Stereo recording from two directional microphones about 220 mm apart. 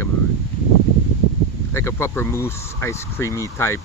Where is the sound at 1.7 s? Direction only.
10° left (ahead or behind).